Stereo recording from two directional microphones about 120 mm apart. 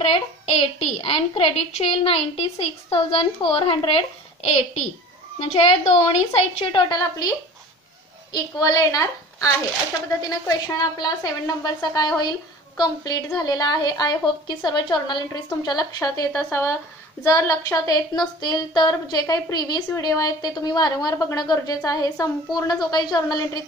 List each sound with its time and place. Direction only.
0.0 s a woman's voice: 50° left (ahead or behind)
6.9 s a woman's voice: 30° left (ahead or behind)
10.8 s a woman's voice: 35° left (ahead or behind)
16.3 s a woman's voice: 20° left (ahead or behind)